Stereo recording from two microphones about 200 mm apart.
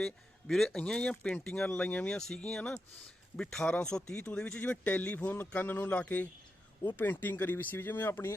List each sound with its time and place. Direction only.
0.0 s speech: centre (ahead or behind)